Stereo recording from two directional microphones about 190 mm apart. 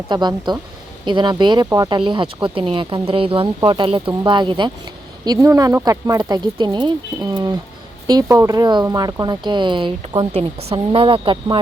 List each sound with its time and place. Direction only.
0.1 s speech: 25° right (ahead or behind)